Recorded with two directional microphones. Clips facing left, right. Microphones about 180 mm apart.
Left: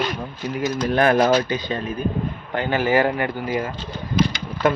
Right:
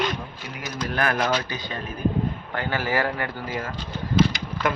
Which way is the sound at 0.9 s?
25° left (ahead or behind).